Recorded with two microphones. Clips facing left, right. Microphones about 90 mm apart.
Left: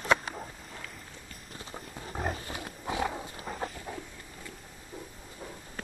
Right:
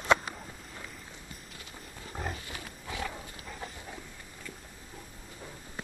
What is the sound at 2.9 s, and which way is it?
Dog, 25° left (ahead or behind).